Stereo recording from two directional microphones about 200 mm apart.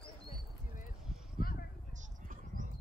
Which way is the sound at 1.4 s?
45° left (ahead or behind).